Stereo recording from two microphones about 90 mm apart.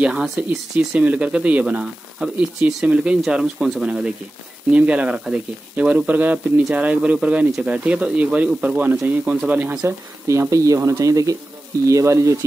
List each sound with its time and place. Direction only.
0.0 s speech: 10° right (ahead or behind)
9.8 s speech: 30° right (ahead or behind)